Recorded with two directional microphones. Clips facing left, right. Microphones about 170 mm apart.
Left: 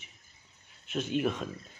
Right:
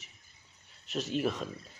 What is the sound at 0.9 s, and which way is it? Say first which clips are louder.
Speech: left 2 dB; 40° right (ahead or behind).